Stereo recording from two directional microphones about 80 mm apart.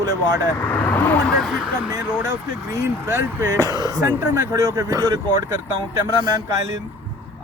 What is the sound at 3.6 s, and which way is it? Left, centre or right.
Speech, right.